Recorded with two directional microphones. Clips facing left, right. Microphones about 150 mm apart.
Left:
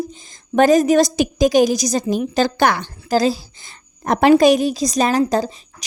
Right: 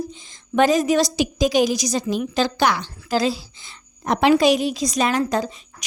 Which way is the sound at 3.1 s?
40° left (ahead or behind).